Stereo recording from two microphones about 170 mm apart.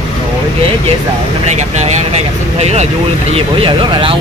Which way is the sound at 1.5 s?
40° right (ahead or behind).